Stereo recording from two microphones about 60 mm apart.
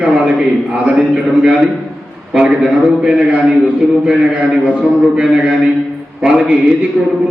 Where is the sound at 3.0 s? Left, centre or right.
Centre.